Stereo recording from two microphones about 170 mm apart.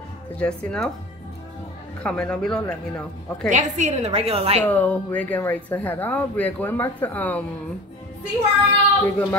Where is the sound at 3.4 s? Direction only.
45° right (ahead or behind).